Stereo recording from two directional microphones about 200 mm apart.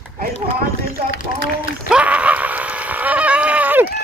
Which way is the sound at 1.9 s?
5° right (ahead or behind).